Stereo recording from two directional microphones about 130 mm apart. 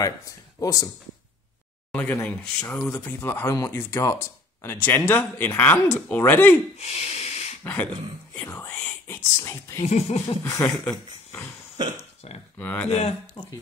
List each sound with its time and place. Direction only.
0.6 s speech: 25° left (ahead or behind)
1.9 s speech: 10° left (ahead or behind)
6.8 s a sound: 55° left (ahead or behind)
7.6 s speech: 10° left (ahead or behind)
9.8 s music: 55° left (ahead or behind)
10.4 s speech: 20° left (ahead or behind)
12.5 s speech: 10° left (ahead or behind)
13.4 s speech: 35° left (ahead or behind)